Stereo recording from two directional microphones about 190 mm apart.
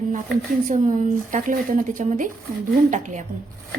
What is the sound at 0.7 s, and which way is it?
Speech, 40° right (ahead or behind).